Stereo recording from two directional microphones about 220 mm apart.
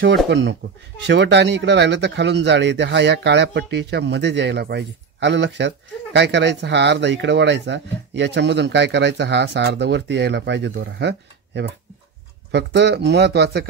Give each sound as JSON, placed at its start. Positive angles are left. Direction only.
{"t": 0.3, "sound": "speech", "side_deg": -55}